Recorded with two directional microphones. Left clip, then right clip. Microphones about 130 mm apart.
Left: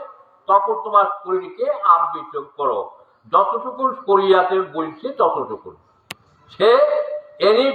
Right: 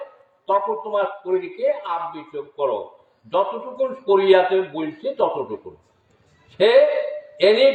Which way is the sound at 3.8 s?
25° right (ahead or behind).